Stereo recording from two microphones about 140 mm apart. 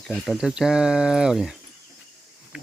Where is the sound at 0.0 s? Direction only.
Centre (ahead or behind).